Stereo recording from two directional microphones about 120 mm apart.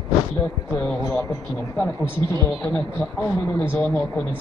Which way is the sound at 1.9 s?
25° left (ahead or behind).